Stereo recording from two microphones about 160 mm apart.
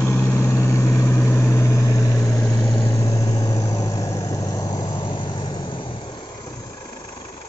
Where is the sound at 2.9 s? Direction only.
20° left (ahead or behind).